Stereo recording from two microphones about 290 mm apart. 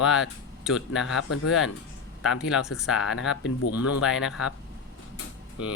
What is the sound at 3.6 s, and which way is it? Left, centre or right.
Speech, left.